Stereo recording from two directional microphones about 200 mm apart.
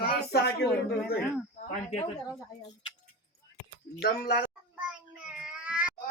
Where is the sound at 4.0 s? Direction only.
45° left (ahead or behind).